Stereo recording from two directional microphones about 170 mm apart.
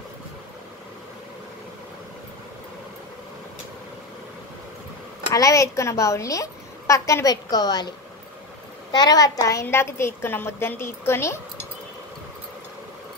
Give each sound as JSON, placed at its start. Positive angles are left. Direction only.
{"t": 5.3, "sound": "a woman's voice", "side_deg": 20}
{"t": 8.9, "sound": "a woman's voice", "side_deg": 20}